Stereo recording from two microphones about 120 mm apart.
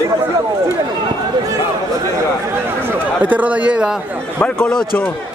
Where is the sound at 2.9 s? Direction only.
15° right (ahead or behind).